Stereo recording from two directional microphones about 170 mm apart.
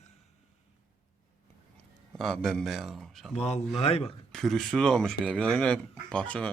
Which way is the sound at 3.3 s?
40° left (ahead or behind).